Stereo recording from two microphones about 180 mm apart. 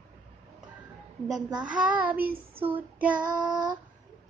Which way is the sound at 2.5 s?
30° right (ahead or behind).